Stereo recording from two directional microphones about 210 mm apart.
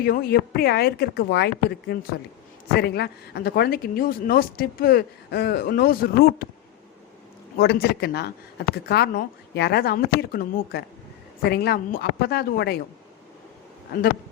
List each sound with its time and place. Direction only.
0.0 s speech: 45° left (ahead or behind)
7.6 s speech: 50° left (ahead or behind)